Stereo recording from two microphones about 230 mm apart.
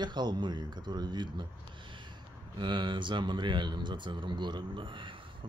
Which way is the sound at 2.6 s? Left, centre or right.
Right.